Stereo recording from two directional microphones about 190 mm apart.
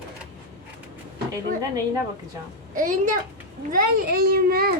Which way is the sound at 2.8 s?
45° right (ahead or behind).